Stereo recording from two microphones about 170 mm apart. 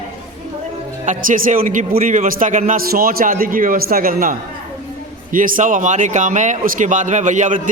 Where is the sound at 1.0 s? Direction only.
50° right (ahead or behind).